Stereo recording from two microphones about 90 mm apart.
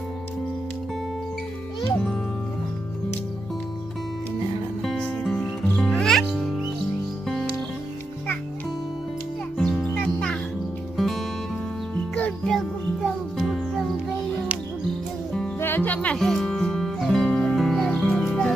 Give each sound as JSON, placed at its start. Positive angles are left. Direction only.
{"t": 4.8, "sound": "music", "side_deg": 5}
{"t": 9.6, "sound": "music", "side_deg": 5}
{"t": 11.0, "sound": "music", "side_deg": 0}
{"t": 12.5, "sound": "music", "side_deg": -5}
{"t": 15.6, "sound": "music", "side_deg": 20}
{"t": 16.2, "sound": "music", "side_deg": 5}